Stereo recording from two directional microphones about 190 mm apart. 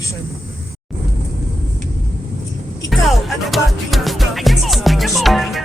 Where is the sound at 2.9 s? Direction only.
Centre (ahead or behind).